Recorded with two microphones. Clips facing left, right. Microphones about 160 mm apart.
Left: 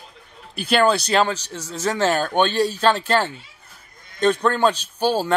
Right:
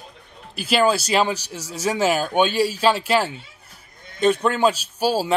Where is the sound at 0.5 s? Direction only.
5° right (ahead or behind).